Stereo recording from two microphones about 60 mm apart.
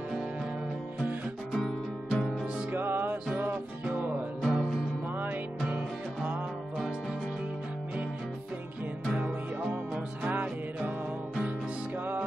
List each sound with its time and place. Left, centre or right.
1.5 s music: centre
2.4 s music: right
4.5 s music: centre
5.1 s music: right
9.1 s music: right
10.2 s music: right